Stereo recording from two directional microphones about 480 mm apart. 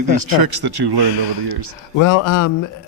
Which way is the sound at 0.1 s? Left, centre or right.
Right.